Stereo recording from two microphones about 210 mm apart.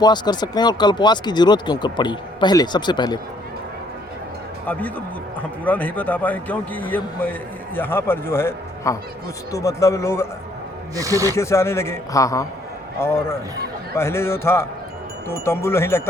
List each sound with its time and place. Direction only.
0.0 s speech: 20° left (ahead or behind)
4.6 s a man's voice: 10° left (ahead or behind)
10.9 s speech: 15° right (ahead or behind)
11.3 s a man's voice: 15° left (ahead or behind)